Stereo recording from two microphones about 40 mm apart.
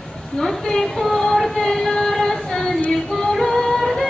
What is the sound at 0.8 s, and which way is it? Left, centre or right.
Female singing, centre.